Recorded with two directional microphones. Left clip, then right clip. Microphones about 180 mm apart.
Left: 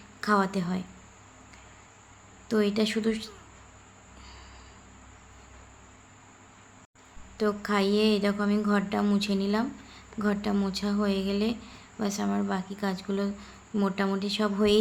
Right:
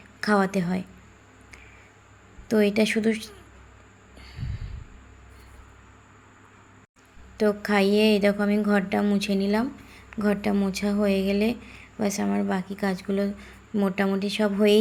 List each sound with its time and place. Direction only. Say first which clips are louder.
0.2 s a woman's voice: right 3 dB; 20° right (ahead or behind)
2.5 s a woman's voice: right 5 dB; 20° right (ahead or behind)
7.3 s a woman's voice: right 5 dB; 20° right (ahead or behind)